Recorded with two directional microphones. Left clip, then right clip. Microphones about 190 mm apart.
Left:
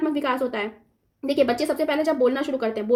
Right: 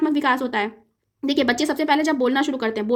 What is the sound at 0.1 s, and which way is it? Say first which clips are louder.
A woman's voice: right 4 dB; 50° right (ahead or behind).